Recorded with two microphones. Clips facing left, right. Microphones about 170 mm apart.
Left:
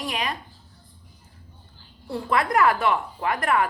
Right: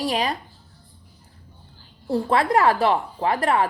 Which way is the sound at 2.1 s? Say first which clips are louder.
Right 4 dB; 30° right (ahead or behind).